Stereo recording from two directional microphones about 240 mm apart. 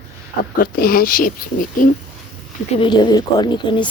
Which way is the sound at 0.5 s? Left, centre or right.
Left.